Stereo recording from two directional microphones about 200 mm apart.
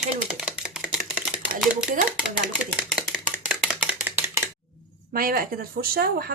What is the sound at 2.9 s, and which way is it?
Chopping, 5° right (ahead or behind).